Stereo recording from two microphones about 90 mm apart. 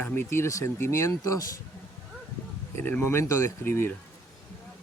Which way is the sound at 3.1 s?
30° left (ahead or behind).